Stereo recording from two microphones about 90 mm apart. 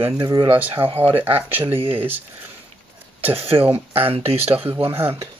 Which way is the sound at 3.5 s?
60° right (ahead or behind).